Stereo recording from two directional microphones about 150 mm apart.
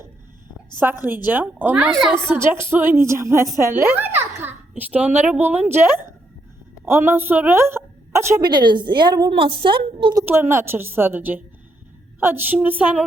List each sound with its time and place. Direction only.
1.0 s a woman's voice: 10° right (ahead or behind)
2.1 s a woman's voice: 15° right (ahead or behind)
8.4 s a woman's voice: 30° right (ahead or behind)
10.2 s a woman's voice: 15° right (ahead or behind)